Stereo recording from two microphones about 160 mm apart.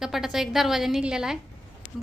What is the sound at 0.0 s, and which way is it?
A woman's voice, centre (ahead or behind).